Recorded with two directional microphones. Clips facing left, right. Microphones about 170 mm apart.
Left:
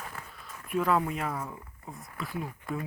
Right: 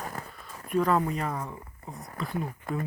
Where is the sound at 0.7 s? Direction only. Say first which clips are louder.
Right 2 dB; 5° left (ahead or behind).